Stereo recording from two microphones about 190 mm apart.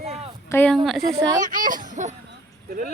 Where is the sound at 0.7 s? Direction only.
Centre (ahead or behind).